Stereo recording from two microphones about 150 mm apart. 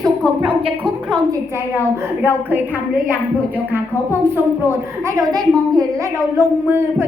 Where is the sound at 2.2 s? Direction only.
15° right (ahead or behind).